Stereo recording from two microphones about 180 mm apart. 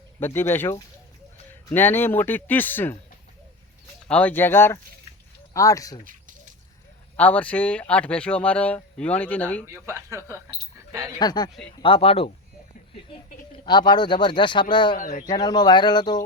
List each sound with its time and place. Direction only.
0.2 s speech: 10° left (ahead or behind)
4.1 s speech: 10° left (ahead or behind)
7.2 s speech: 10° left (ahead or behind)
9.6 s speech: 15° right (ahead or behind)
11.2 s speech: 20° left (ahead or behind)
13.7 s speech: 25° left (ahead or behind)
14.9 s speech: 45° left (ahead or behind)
15.3 s speech: 20° left (ahead or behind)